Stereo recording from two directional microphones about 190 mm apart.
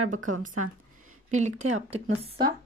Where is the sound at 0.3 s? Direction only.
45° right (ahead or behind).